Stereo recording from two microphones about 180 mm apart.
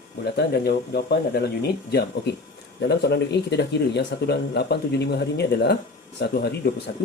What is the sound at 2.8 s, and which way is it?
Speech, 65° left (ahead or behind).